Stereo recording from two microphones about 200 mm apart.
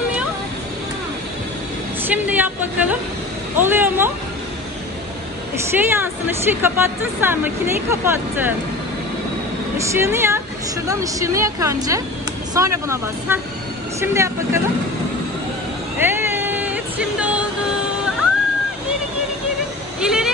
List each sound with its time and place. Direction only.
2.0 s speech: 10° right (ahead or behind)
5.8 s speech: 10° right (ahead or behind)
9.8 s speech: 10° right (ahead or behind)
16.0 s a sound: 10° right (ahead or behind)
20.0 s vehicle: 5° right (ahead or behind)